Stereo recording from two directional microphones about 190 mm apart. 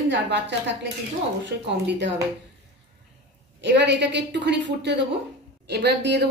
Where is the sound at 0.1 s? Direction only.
65° right (ahead or behind).